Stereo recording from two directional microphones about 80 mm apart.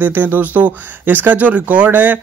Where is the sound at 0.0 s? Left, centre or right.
Right.